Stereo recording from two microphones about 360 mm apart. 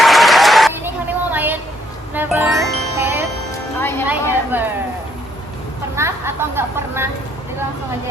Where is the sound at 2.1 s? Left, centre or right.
Centre.